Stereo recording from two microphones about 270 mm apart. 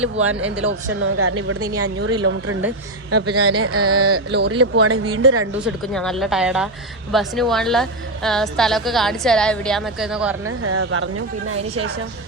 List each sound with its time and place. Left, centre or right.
0.2 s a woman's voice: right
3.3 s a woman's voice: right
5.5 s a woman's voice: centre
10.4 s a woman's voice: right